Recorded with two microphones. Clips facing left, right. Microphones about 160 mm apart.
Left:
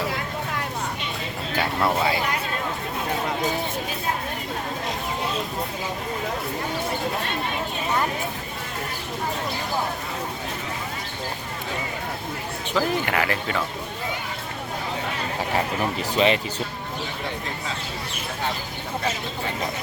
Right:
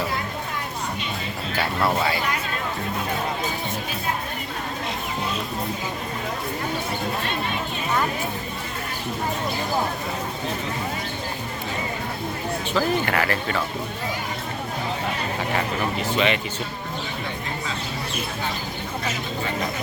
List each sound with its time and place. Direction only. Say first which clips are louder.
12.7 s speech: even; 15° left (ahead or behind)
16.1 s speech: left 3 dB; 35° left (ahead or behind)